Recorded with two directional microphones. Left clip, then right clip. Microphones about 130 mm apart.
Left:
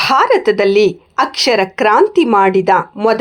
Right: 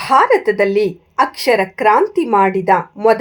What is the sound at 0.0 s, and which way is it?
A woman's voice, 25° left (ahead or behind).